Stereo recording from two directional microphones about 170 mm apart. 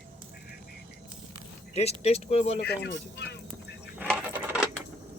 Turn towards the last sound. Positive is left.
turn(degrees=-10)  # may be behind; listen again after turning